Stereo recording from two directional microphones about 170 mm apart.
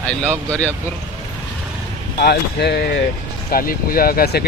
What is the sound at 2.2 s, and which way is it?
Speech, 75° left (ahead or behind).